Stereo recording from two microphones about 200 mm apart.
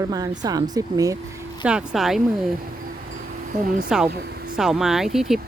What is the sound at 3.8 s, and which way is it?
Speech, 5° right (ahead or behind).